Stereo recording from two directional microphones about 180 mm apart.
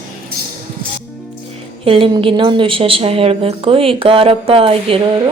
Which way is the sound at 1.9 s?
30° right (ahead or behind).